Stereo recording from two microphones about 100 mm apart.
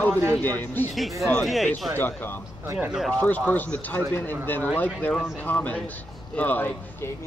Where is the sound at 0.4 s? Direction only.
20° left (ahead or behind).